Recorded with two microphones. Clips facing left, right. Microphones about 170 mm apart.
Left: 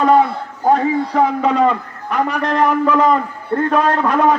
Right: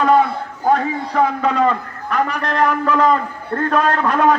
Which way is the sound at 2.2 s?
25° left (ahead or behind).